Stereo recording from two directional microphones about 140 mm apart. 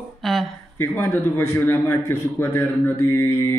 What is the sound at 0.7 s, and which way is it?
A man's voice, 20° left (ahead or behind).